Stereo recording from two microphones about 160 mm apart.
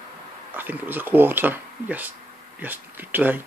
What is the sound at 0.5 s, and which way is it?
Speech, 10° right (ahead or behind).